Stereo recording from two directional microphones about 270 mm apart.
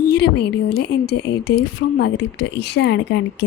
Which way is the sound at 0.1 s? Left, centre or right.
Left.